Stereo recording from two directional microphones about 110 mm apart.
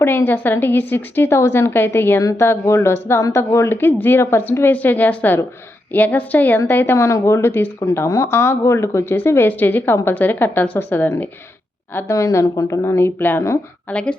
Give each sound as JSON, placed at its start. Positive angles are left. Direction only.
{"t": 0.0, "sound": "a woman's voice", "side_deg": 20}
{"t": 11.9, "sound": "speech", "side_deg": 30}
{"t": 13.9, "sound": "a woman's voice", "side_deg": 10}